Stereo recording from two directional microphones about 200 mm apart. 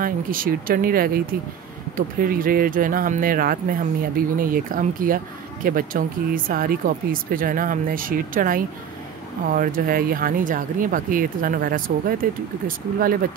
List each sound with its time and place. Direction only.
0.0 s speech: 45° right (ahead or behind)